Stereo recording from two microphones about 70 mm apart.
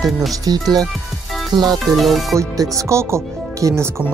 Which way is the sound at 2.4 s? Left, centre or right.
Right.